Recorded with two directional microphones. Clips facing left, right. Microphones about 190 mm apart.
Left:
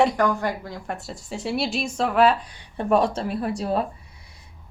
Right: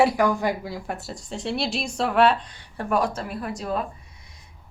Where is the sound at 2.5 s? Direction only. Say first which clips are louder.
Left 3 dB; 15° left (ahead or behind).